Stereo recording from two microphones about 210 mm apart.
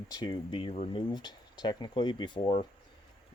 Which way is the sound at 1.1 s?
20° left (ahead or behind).